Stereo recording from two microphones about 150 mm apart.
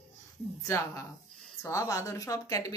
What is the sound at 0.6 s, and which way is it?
Speech, 20° left (ahead or behind).